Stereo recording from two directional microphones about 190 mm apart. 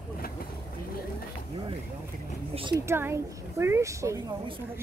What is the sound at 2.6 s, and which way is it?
Speech, 20° right (ahead or behind).